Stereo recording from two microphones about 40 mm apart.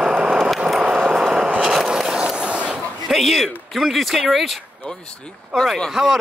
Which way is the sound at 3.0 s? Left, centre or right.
Centre.